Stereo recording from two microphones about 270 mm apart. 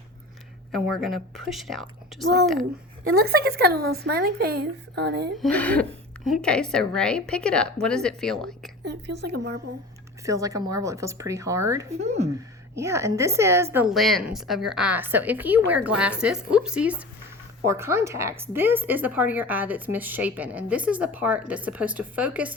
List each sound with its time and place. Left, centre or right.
0.7 s a woman's voice: centre
3.2 s a woman's voice: right
5.4 s a woman's voice: centre
8.8 s a woman's voice: right
10.2 s speech: centre
11.9 s speech: right
12.7 s a woman's voice: centre